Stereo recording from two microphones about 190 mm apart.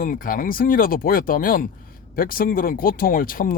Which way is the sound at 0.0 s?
45° left (ahead or behind).